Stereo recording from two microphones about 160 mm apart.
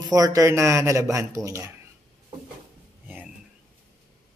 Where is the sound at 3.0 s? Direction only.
10° right (ahead or behind).